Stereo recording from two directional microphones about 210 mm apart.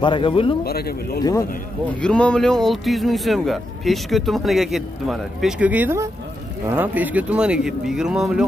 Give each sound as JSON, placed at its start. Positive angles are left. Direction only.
{"t": 0.0, "sound": "speech", "side_deg": 25}
{"t": 0.7, "sound": "speech", "side_deg": 45}
{"t": 2.0, "sound": "speech", "side_deg": 5}